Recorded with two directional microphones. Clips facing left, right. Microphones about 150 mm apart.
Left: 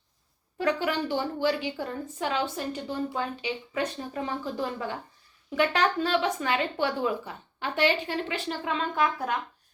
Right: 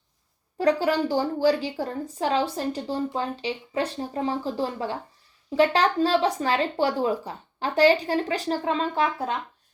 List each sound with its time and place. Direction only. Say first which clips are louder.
0.6 s a woman's voice: right 5 dB; 35° right (ahead or behind)